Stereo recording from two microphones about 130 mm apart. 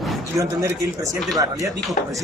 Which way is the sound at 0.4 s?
25° right (ahead or behind).